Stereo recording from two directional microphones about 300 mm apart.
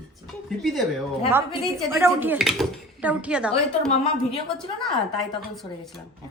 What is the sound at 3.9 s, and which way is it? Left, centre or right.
Speech, centre.